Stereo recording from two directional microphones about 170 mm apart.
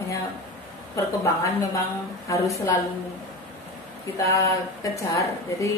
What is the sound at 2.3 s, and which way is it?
Speech, 20° left (ahead or behind).